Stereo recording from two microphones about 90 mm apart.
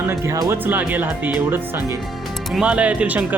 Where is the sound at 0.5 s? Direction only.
20° right (ahead or behind).